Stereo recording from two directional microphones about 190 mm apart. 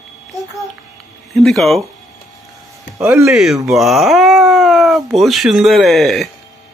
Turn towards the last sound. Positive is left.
turn(degrees=0)  # may be behind; listen again after turning